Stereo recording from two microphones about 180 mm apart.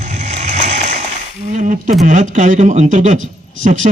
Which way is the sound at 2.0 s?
45° right (ahead or behind).